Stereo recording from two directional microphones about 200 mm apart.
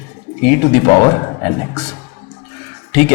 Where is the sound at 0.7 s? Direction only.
20° left (ahead or behind).